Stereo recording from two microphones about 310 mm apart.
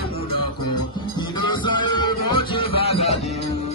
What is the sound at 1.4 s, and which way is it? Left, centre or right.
Music, centre.